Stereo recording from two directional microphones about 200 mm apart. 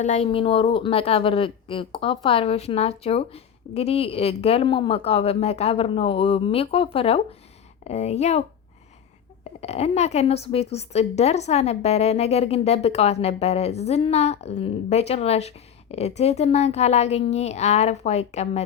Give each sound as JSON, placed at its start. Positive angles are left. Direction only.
{"t": 0.0, "sound": "a woman's voice", "side_deg": 30}
{"t": 9.6, "sound": "a woman's voice", "side_deg": 30}